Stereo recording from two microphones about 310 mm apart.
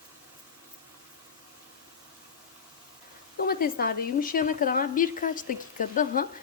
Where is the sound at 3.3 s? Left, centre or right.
Left.